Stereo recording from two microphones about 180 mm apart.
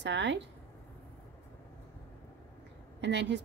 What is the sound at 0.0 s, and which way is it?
Speech, 80° right.